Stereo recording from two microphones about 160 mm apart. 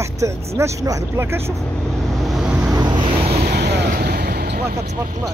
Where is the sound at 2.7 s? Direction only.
25° right (ahead or behind).